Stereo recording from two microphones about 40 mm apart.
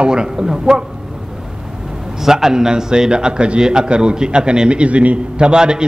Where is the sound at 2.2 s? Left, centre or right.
Centre.